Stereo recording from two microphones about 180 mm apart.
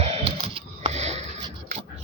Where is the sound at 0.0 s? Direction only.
35° right (ahead or behind).